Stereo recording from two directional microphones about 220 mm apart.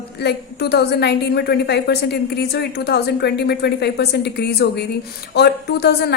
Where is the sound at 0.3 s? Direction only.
50° left (ahead or behind).